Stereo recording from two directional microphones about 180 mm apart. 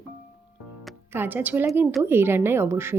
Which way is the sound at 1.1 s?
10° right (ahead or behind).